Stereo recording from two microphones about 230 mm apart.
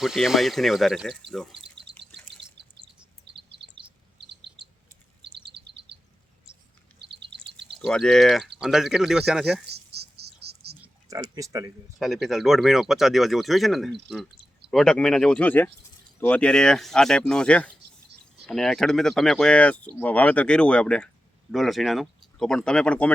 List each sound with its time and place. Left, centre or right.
0.0 s speech: centre
1.5 s bird: right
3.6 s chirp: right
5.5 s bird vocalization: right
7.0 s bird: right
7.8 s speech: centre
9.6 s insect: right
10.8 s a sound: centre
11.9 s speech: centre